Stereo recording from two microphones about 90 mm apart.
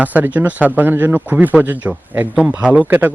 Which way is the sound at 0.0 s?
20° right (ahead or behind).